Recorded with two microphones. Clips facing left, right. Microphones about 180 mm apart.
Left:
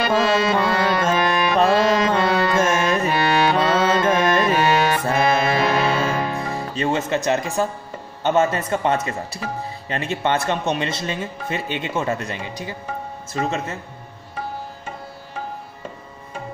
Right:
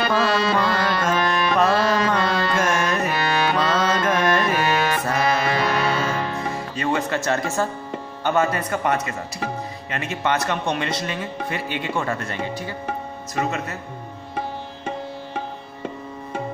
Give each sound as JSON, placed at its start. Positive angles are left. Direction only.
{"t": 0.1, "sound": "speech", "side_deg": 25}
{"t": 1.1, "sound": "music", "side_deg": 10}
{"t": 1.6, "sound": "music", "side_deg": 25}
{"t": 6.1, "sound": "music", "side_deg": 15}
{"t": 6.5, "sound": "speech", "side_deg": 30}
{"t": 13.3, "sound": "speech", "side_deg": 25}